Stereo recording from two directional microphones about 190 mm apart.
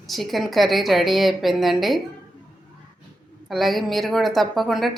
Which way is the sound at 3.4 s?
Centre (ahead or behind).